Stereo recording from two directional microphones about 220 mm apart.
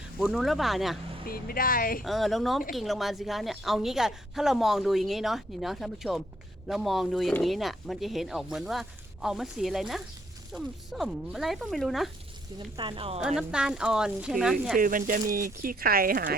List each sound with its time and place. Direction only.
0.2 s a woman's voice: centre (ahead or behind)
1.3 s speech: 40° left (ahead or behind)
2.0 s a woman's voice: centre (ahead or behind)
12.7 s speech: 20° right (ahead or behind)
13.1 s a woman's voice: 5° right (ahead or behind)
14.8 s speech: 40° right (ahead or behind)